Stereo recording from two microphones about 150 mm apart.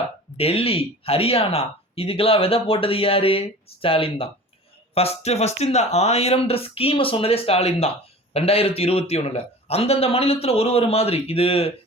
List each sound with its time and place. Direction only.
0.3 s speech: 40° left (ahead or behind)